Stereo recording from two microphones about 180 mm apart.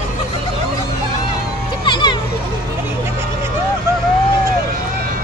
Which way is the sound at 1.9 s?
25° left (ahead or behind).